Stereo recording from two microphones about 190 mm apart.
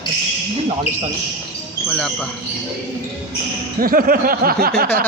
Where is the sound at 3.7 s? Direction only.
50° right (ahead or behind).